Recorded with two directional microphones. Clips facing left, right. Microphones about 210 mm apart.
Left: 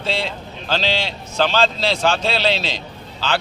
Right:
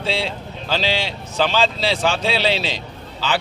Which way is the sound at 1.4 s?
10° right (ahead or behind).